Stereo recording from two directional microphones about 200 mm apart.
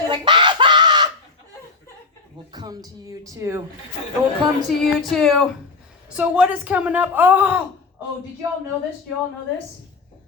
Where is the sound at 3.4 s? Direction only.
15° right (ahead or behind).